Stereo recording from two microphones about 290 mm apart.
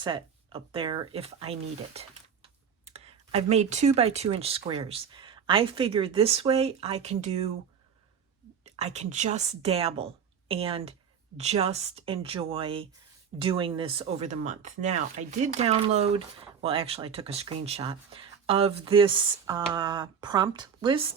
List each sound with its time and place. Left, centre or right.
0.0 s speech: centre
8.6 s speech: right